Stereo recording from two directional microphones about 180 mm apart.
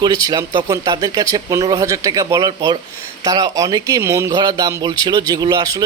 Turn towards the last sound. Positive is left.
turn(degrees=-20)  # may be behind; listen again after turning